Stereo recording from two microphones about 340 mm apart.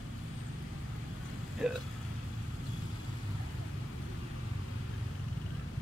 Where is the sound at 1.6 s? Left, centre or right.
Centre.